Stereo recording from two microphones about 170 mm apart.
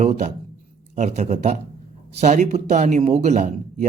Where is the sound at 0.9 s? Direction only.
45° right (ahead or behind).